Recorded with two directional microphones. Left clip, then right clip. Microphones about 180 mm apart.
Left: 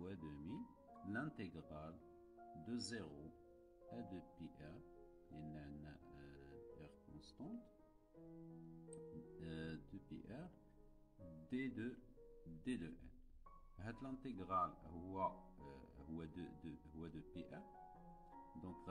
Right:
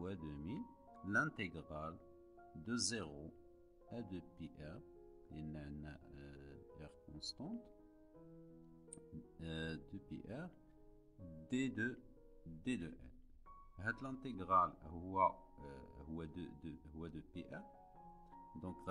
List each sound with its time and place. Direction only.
0.0 s music: 35° right (ahead or behind)
2.6 s speech: 35° right (ahead or behind)
5.3 s music: 35° right (ahead or behind)
8.9 s music: 35° right (ahead or behind)
11.4 s speech: 35° right (ahead or behind)